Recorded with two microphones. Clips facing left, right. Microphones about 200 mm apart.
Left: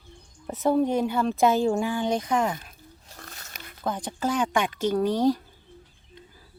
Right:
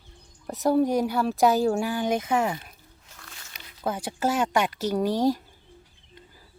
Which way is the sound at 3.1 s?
40° left (ahead or behind).